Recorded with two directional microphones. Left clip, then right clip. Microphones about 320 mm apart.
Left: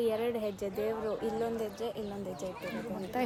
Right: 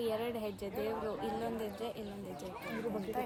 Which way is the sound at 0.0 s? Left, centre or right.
Left.